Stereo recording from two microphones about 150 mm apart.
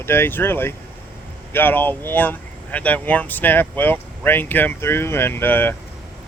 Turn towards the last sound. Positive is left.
turn(degrees=15)  # may be behind; listen again after turning